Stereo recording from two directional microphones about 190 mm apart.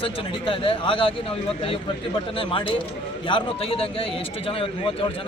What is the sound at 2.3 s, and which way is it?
A man's voice, 25° left (ahead or behind).